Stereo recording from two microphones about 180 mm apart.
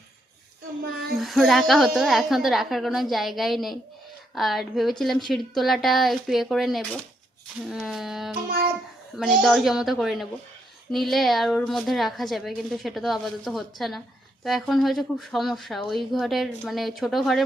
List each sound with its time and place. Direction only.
1.1 s a woman's voice: centre (ahead or behind)